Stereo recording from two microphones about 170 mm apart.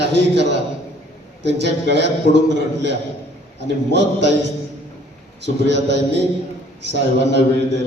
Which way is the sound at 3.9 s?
90° right.